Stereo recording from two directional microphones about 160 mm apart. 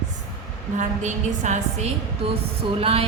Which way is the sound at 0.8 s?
50° right (ahead or behind).